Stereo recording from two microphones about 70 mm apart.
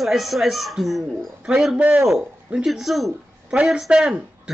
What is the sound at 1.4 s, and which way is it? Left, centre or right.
A man's voice, centre.